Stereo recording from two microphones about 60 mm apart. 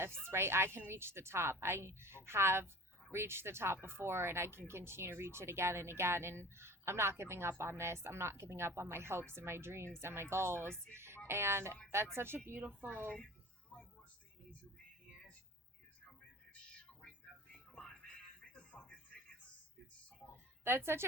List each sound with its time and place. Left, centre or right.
0.3 s speech: right
17.5 s music: centre
18.7 s music: centre
20.7 s speech: right